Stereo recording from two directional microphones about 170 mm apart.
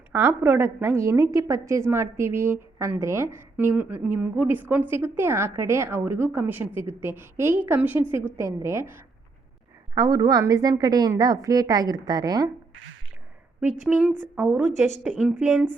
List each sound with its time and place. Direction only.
0.1 s a woman's voice: 15° right (ahead or behind)
13.8 s a woman's voice: 5° right (ahead or behind)
14.7 s speech: 45° left (ahead or behind)
15.0 s a woman's voice: 5° right (ahead or behind)